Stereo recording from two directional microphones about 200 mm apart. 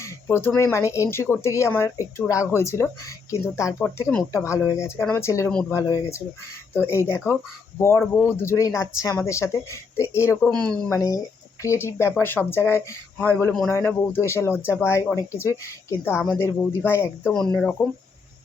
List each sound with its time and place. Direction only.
0.0 s a woman's voice: 10° left (ahead or behind)
16.1 s speech: centre (ahead or behind)
16.4 s a woman's voice: 10° left (ahead or behind)